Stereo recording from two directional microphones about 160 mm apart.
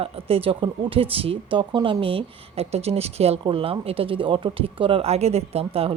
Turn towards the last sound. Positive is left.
turn(degrees=-40)  # may be behind; listen again after turning